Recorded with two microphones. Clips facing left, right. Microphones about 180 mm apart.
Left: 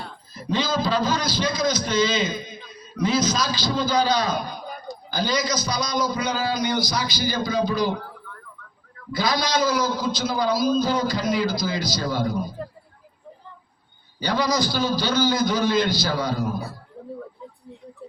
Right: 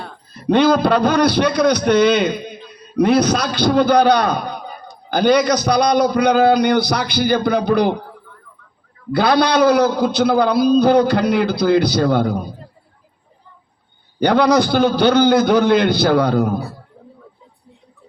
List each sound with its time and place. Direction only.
0.0 s a man's voice: 60° right (ahead or behind)
9.1 s a man's voice: 65° right (ahead or behind)
14.2 s a man's voice: 65° right (ahead or behind)